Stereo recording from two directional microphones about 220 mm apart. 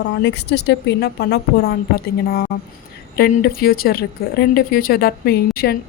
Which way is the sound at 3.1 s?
45° left (ahead or behind).